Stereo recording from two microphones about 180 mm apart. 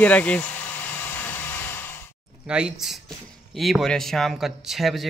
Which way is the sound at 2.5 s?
5° right (ahead or behind).